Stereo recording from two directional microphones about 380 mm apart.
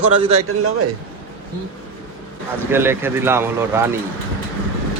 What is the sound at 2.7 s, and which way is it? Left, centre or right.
Speech, centre.